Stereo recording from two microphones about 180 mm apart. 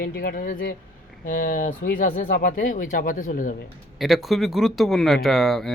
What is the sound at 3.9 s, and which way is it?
Speech, centre (ahead or behind).